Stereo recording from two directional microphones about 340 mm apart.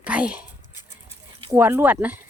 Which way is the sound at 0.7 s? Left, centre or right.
Left.